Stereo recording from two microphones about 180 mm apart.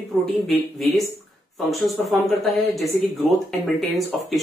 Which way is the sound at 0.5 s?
Centre (ahead or behind).